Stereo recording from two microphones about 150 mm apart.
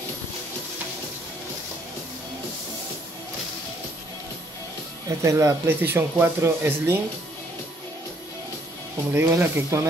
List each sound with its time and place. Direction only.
5.0 s speech: 20° right (ahead or behind)
9.1 s speech: 15° right (ahead or behind)